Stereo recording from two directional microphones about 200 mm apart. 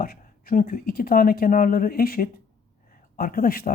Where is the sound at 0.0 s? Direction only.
45° left (ahead or behind).